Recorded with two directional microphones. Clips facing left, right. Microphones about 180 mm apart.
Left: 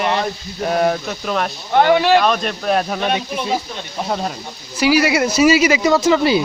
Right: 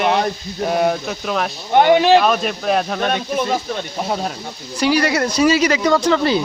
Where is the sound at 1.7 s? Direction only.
20° right (ahead or behind).